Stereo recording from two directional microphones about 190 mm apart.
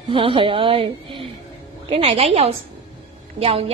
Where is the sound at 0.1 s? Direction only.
30° right (ahead or behind).